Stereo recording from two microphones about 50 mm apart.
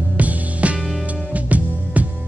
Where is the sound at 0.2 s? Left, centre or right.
Right.